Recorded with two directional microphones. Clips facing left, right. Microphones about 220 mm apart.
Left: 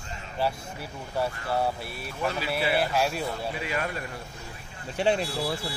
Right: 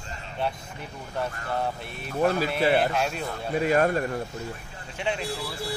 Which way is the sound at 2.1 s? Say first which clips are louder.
Right 7 dB; 45° right (ahead or behind).